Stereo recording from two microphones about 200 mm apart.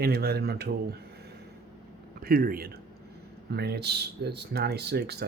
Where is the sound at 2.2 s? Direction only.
50° right (ahead or behind).